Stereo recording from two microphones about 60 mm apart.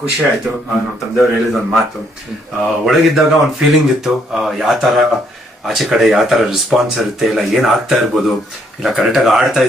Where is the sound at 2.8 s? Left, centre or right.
Centre.